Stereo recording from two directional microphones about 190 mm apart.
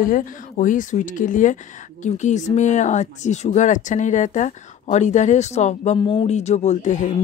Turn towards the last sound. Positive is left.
turn(degrees=40)  # may be behind; listen again after turning